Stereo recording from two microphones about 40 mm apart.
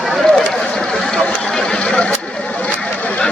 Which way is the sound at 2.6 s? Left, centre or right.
Left.